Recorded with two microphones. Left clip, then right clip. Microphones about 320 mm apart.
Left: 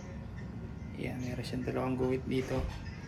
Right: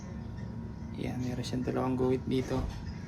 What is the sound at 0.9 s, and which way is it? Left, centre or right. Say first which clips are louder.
Speech: right 2 dB; centre.